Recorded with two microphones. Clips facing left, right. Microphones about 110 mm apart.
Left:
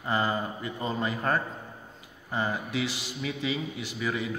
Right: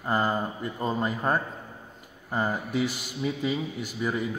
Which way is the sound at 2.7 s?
50° right (ahead or behind).